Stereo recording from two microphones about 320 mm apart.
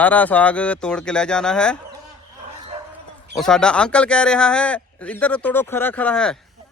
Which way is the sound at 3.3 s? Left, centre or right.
Centre.